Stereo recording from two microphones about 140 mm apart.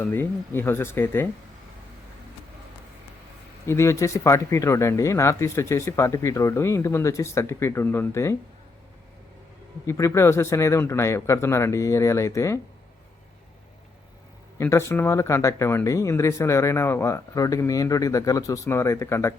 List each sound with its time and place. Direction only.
0.0 s speech: 15° left (ahead or behind)
3.7 s speech: 20° left (ahead or behind)
9.8 s speech: 20° left (ahead or behind)
14.6 s speech: 20° left (ahead or behind)